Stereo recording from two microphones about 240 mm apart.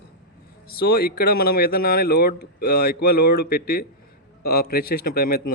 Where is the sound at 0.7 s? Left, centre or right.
Left.